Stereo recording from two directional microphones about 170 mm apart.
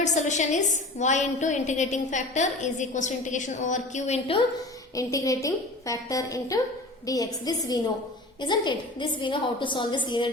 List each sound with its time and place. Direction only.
0.0 s a woman's voice: 45° left (ahead or behind)
4.9 s a woman's voice: 20° left (ahead or behind)